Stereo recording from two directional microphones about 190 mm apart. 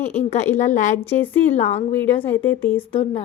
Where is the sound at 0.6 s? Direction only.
40° left (ahead or behind).